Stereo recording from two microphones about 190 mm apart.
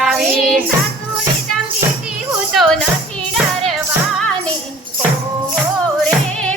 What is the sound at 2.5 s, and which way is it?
Music, centre (ahead or behind).